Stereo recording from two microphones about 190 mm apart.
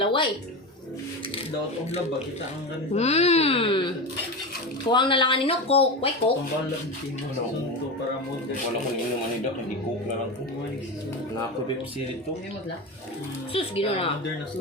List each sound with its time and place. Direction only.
0.0 s speech: 25° left (ahead or behind)
2.9 s speech: 35° left (ahead or behind)
13.5 s speech: 30° left (ahead or behind)